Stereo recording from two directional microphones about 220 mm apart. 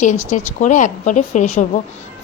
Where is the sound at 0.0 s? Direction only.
35° left (ahead or behind).